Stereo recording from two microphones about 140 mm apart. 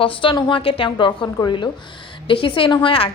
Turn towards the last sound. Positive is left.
turn(degrees=40)  # may be behind; listen again after turning